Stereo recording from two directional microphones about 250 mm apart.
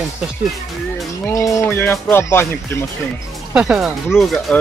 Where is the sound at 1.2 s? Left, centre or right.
Centre.